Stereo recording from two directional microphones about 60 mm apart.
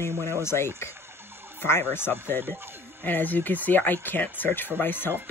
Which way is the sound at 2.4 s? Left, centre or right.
Right.